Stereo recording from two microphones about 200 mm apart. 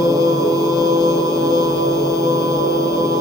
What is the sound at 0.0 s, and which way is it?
Music, 15° right (ahead or behind).